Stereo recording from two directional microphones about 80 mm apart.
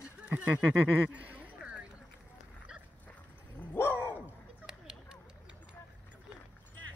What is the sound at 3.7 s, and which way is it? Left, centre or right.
Dog, left.